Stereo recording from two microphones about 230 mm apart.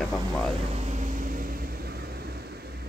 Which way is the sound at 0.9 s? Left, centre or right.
Right.